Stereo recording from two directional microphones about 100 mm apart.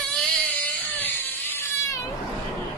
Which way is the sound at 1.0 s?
20° left (ahead or behind).